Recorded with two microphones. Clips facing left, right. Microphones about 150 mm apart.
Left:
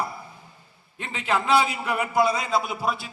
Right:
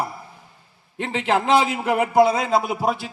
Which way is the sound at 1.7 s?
55° right (ahead or behind).